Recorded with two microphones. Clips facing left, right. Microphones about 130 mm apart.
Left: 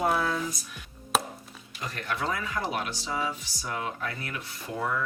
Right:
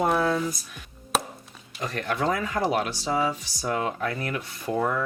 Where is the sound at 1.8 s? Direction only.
50° right (ahead or behind).